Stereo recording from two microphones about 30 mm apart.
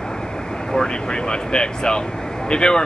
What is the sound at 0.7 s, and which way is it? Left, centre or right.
Speech, left.